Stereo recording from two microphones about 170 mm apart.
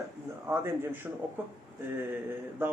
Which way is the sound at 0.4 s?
15° right (ahead or behind).